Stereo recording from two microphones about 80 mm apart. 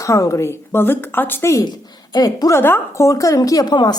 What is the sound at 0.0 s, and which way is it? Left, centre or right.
A woman's voice, left.